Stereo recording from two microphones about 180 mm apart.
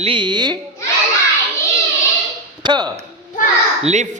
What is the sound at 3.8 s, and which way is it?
Speech, 40° right (ahead or behind).